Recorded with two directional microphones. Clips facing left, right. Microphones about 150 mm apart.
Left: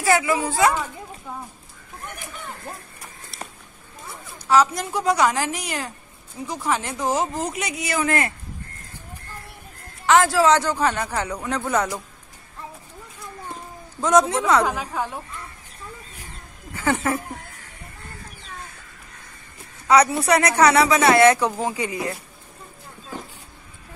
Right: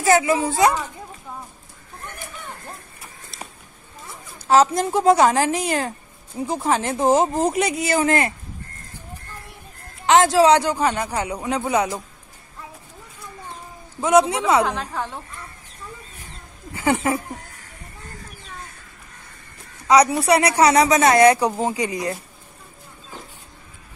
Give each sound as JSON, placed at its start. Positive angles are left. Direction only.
{"t": 0.0, "sound": "speech", "side_deg": -20}
{"t": 4.6, "sound": "speech", "side_deg": -25}
{"t": 10.0, "sound": "a man's voice", "side_deg": -20}
{"t": 14.0, "sound": "a man's voice", "side_deg": -10}
{"t": 14.7, "sound": "a woman's voice", "side_deg": 10}
{"t": 16.7, "sound": "a man's voice", "side_deg": -15}
{"t": 19.9, "sound": "a man's voice", "side_deg": -15}
{"t": 20.6, "sound": "speech", "side_deg": -35}
{"t": 21.2, "sound": "a man's voice", "side_deg": -15}